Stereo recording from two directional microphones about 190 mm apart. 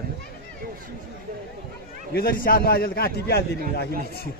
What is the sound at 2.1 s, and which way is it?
A man's voice, 50° left (ahead or behind).